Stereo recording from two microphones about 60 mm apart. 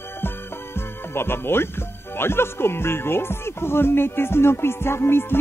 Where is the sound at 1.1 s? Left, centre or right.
Left.